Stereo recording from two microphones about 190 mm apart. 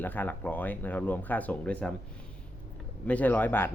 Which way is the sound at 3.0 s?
10° left (ahead or behind).